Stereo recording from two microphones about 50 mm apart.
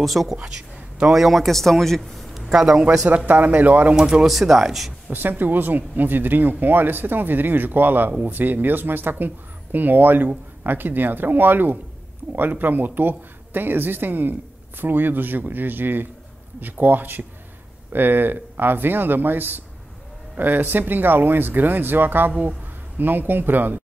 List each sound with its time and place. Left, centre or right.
0.0 s speech: centre
0.9 s a man's voice: centre
2.5 s speech: centre
3.3 s speech: right
3.9 s speech: centre
4.3 s speech: centre
5.1 s speech: right